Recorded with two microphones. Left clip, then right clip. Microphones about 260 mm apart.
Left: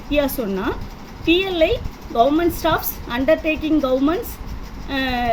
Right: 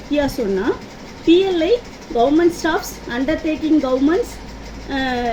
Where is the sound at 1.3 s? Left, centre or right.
Left.